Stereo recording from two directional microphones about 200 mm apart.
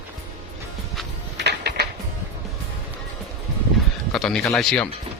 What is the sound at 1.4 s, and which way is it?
Music, 55° right (ahead or behind).